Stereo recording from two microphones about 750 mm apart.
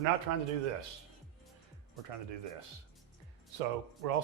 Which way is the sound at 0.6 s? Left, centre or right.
Right.